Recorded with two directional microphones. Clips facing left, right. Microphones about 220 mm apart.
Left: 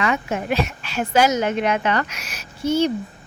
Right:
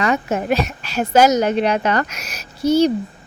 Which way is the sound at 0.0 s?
40° right (ahead or behind).